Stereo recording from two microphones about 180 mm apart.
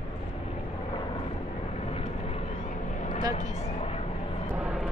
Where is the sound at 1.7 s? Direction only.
35° left (ahead or behind).